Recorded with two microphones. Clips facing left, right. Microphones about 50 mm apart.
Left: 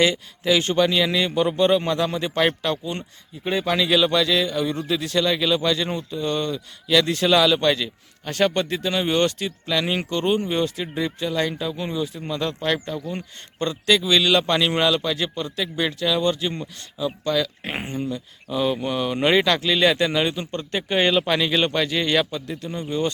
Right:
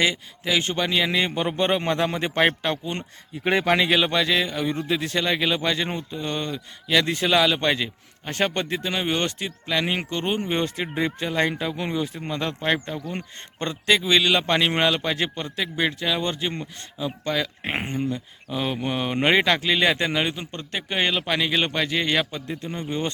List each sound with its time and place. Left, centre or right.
0.0 s speech: centre; by 3.0 s right
3.4 s speech: right
3.8 s a man's voice: right